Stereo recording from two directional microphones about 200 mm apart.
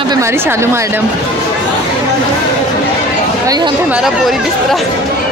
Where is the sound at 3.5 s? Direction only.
20° right (ahead or behind).